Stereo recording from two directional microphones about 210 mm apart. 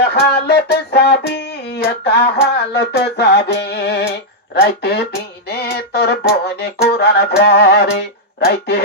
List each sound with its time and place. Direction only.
0.1 s music: 50° left (ahead or behind)